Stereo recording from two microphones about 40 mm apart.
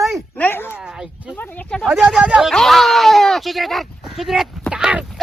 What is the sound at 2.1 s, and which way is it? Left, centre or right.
Speech, right.